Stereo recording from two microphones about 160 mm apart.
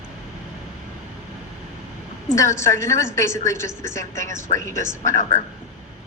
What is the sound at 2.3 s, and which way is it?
Speech, 20° left (ahead or behind).